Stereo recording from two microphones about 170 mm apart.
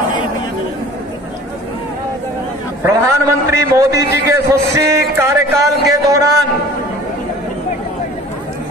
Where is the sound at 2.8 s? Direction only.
15° right (ahead or behind).